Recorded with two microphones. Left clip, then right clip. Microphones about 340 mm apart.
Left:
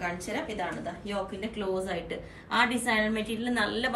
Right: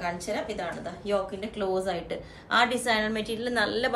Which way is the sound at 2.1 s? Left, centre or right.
Centre.